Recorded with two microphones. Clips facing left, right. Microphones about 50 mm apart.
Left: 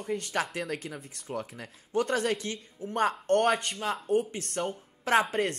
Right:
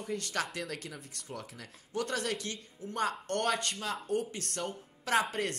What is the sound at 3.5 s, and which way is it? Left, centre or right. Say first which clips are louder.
Speech: left 4 dB; centre.